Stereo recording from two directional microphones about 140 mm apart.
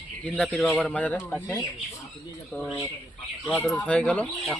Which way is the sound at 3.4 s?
10° left (ahead or behind).